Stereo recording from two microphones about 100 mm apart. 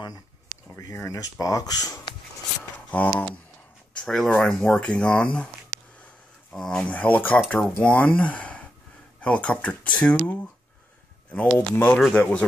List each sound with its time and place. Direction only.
0.9 s speech: 30° left (ahead or behind)
2.9 s speech: 15° left (ahead or behind)
6.5 s speech: 10° left (ahead or behind)